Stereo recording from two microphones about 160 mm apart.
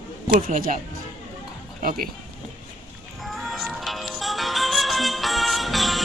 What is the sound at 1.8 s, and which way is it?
Speech, 65° right (ahead or behind).